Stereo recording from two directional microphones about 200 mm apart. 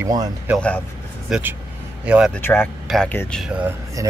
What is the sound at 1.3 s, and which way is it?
Speech, 10° right (ahead or behind).